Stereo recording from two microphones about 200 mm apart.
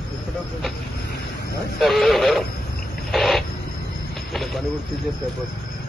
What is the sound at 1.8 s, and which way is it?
Speech, centre (ahead or behind).